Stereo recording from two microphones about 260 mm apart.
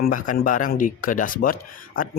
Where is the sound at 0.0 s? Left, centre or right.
Left.